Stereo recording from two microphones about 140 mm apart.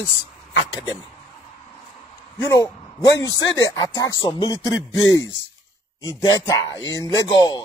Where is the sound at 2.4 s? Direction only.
25° left (ahead or behind).